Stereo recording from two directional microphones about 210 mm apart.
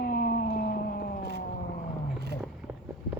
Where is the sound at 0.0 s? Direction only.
45° left (ahead or behind).